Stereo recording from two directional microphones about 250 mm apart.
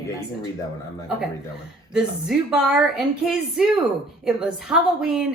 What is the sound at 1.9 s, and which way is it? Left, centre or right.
A woman's voice, centre.